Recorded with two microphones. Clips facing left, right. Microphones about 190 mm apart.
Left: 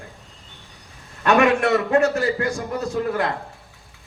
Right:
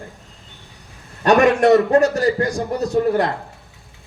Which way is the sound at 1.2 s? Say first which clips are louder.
Right 4 dB; 35° right (ahead or behind).